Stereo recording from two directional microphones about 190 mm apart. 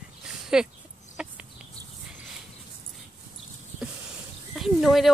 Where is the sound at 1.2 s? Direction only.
5° right (ahead or behind).